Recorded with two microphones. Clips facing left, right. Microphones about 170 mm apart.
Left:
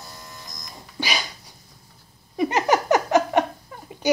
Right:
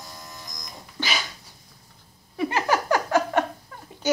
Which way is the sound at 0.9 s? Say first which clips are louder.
Left 2 dB; 15° left (ahead or behind).